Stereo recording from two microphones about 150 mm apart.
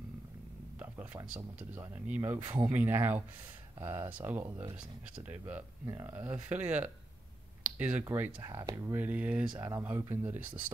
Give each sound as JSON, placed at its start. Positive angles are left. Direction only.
{"t": 0.7, "sound": "a sound", "side_deg": -10}
{"t": 1.8, "sound": "speech", "side_deg": -10}
{"t": 8.0, "sound": "speech", "side_deg": -15}